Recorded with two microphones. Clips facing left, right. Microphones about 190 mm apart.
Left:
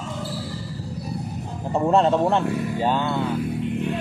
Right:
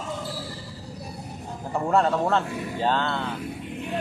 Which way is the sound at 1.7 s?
20° left (ahead or behind).